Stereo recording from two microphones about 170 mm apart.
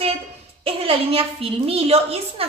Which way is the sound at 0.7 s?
35° right (ahead or behind).